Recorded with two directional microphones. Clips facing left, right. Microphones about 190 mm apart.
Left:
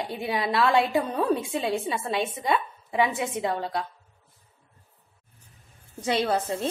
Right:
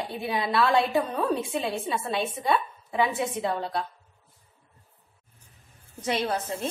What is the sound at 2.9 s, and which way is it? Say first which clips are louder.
Speech: left 1 dB; 20° left (ahead or behind).